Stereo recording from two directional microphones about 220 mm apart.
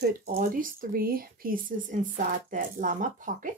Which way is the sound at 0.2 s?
40° right (ahead or behind).